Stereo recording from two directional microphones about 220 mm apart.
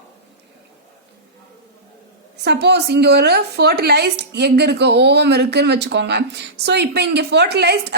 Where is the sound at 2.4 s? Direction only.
50° right (ahead or behind).